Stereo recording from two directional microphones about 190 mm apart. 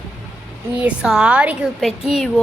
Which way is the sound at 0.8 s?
5° right (ahead or behind).